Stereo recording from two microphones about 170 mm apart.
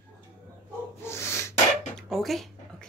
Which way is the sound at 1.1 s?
15° left (ahead or behind).